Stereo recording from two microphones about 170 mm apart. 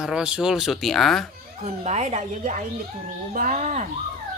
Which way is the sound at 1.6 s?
45° right (ahead or behind).